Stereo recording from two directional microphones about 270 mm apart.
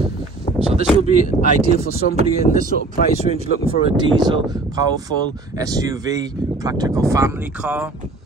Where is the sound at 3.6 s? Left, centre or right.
Centre.